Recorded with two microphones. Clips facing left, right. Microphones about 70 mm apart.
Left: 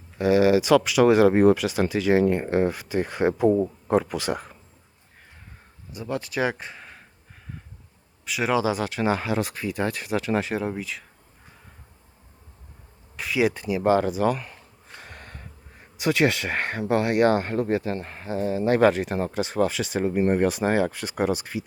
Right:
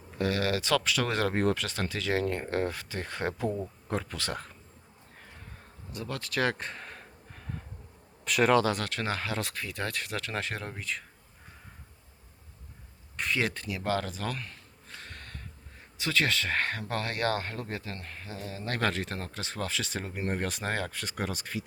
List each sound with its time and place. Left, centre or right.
0.2 s speech: centre
5.9 s speech: centre
8.2 s speech: centre
13.1 s a sound: centre
16.9 s speech: centre